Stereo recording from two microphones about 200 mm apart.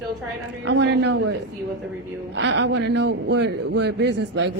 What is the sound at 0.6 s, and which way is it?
A man's voice, 60° right (ahead or behind).